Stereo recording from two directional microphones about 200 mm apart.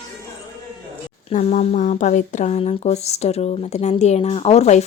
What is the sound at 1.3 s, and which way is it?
Speech, 35° left (ahead or behind).